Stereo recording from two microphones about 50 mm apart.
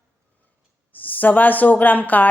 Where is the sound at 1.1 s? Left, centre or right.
Left.